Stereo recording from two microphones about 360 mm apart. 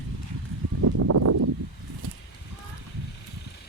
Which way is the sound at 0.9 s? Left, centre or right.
Right.